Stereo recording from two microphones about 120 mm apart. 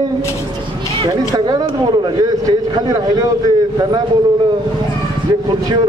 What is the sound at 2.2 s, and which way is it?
A man's voice, 30° right (ahead or behind).